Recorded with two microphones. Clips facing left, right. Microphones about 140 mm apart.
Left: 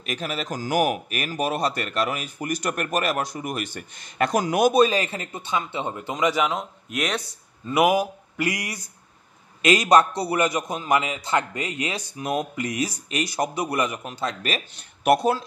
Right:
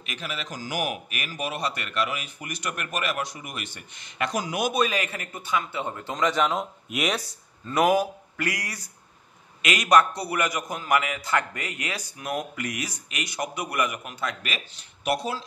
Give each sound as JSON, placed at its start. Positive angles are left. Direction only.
{"t": 0.0, "sound": "a man's voice", "side_deg": 40}
{"t": 7.6, "sound": "speech", "side_deg": 10}
{"t": 9.6, "sound": "a man's voice", "side_deg": 30}
{"t": 14.7, "sound": "speech", "side_deg": 55}